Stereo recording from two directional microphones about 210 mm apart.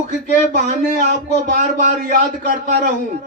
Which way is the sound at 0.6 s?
35° right (ahead or behind).